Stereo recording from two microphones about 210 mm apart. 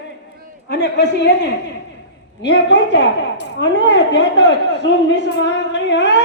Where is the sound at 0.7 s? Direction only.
55° left (ahead or behind).